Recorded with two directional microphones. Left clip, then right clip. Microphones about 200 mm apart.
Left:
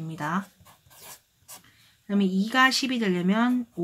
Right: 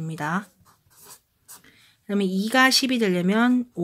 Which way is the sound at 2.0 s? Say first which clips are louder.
Right 2 dB; 45° right (ahead or behind).